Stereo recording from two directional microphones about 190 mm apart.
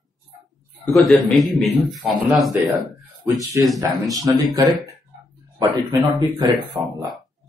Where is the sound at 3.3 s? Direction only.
20° right (ahead or behind).